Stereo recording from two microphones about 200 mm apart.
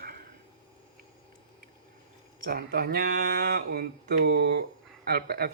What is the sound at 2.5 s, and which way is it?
Speech, 50° right (ahead or behind).